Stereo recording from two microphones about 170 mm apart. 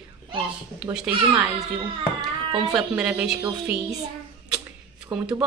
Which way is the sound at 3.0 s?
5° right (ahead or behind).